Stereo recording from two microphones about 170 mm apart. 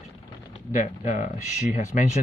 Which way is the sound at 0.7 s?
45° left (ahead or behind).